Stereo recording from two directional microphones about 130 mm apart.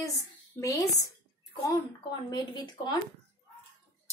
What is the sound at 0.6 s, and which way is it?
Speech, 25° left (ahead or behind).